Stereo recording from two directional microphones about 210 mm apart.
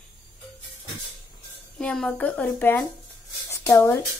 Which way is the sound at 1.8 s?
5° left (ahead or behind).